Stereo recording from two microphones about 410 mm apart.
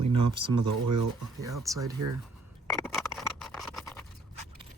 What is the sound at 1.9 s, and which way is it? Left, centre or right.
Speech, right.